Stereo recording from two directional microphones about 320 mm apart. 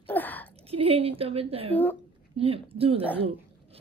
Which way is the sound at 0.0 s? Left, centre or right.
Centre.